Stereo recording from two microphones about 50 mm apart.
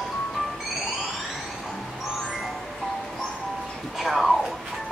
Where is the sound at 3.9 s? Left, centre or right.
Centre.